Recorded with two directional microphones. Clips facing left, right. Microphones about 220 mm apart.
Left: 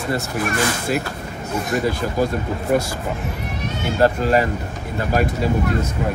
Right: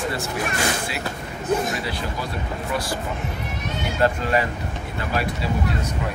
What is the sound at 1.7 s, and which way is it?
Speech, 45° left (ahead or behind).